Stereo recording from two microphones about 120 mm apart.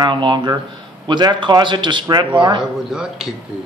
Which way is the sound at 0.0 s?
40° right (ahead or behind).